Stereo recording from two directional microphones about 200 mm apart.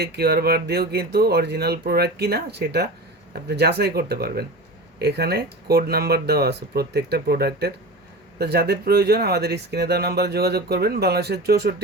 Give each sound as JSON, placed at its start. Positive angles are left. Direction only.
{"t": 0.0, "sound": "speech", "side_deg": -55}